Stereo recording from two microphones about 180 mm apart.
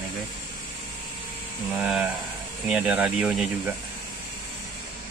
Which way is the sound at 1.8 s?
Centre (ahead or behind).